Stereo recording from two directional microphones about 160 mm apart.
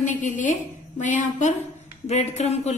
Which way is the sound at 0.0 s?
50° left (ahead or behind).